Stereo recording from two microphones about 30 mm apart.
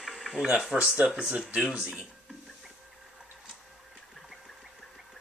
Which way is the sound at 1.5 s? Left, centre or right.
Right.